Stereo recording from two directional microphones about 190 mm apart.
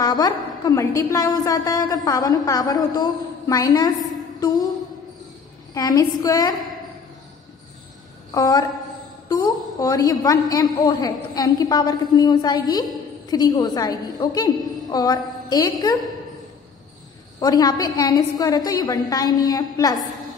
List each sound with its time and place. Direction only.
0.0 s a woman's voice: 20° left (ahead or behind)
5.8 s a woman's voice: 20° left (ahead or behind)
8.3 s a woman's voice: 20° left (ahead or behind)
17.4 s a woman's voice: 20° left (ahead or behind)